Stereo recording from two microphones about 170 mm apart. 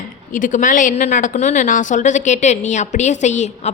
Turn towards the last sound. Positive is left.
turn(degrees=40)  # may be behind; listen again after turning